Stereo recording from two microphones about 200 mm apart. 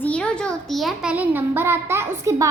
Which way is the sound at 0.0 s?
5° left (ahead or behind).